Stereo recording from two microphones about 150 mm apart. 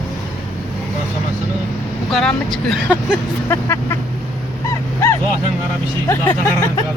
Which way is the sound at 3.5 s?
20° left (ahead or behind).